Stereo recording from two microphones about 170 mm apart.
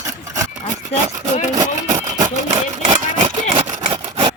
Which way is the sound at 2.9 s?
40° right (ahead or behind).